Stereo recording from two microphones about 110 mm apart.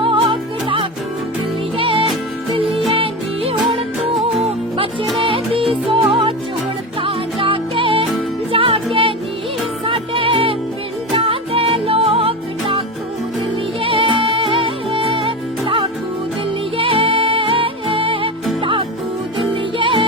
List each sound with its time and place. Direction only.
0.0 s music: 50° right (ahead or behind)
5.2 s music: 55° right (ahead or behind)
13.8 s music: 55° right (ahead or behind)
19.8 s music: 50° right (ahead or behind)